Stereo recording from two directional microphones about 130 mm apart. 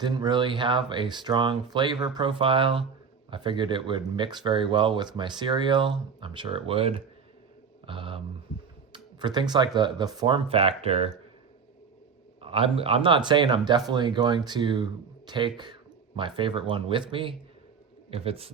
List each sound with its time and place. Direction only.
0.0 s a man's voice: 35° right (ahead or behind)
12.4 s a man's voice: 45° right (ahead or behind)